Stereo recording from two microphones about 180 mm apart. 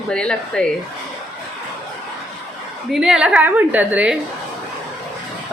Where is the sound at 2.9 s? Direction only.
5° right (ahead or behind).